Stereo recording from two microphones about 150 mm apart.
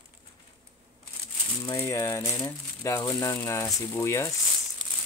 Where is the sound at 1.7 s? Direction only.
20° left (ahead or behind).